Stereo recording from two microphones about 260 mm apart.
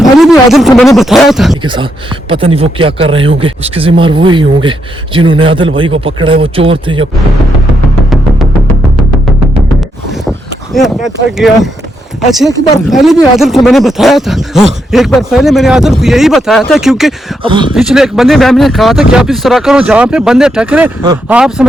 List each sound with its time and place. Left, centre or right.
0.0 s speech: centre
1.6 s speech: centre
10.8 s speech: centre
12.9 s speech: centre
17.4 s speech: centre
17.7 s speech: centre
21.0 s speech: centre
21.3 s speech: centre